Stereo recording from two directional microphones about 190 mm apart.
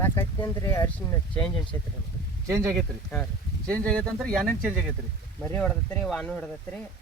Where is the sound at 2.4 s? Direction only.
15° right (ahead or behind).